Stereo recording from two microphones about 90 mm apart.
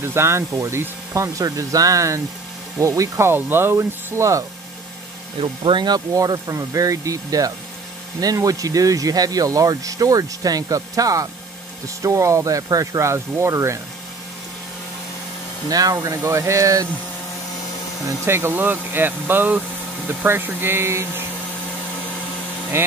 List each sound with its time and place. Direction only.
0.0 s speech: 30° right (ahead or behind)
5.4 s speech: 65° right (ahead or behind); by 13.7 s 35° right (ahead or behind)
15.7 s speech: 40° right (ahead or behind)
18.0 s speech: 25° right (ahead or behind)
22.7 s speech: 25° right (ahead or behind)